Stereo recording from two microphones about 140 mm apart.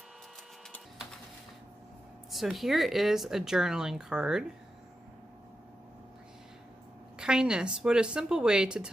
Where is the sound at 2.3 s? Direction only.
Centre (ahead or behind).